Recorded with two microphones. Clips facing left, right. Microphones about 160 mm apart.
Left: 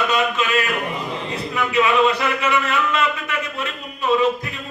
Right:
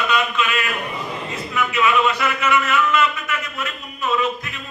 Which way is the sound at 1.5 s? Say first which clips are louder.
Left 1 dB; 35° left (ahead or behind).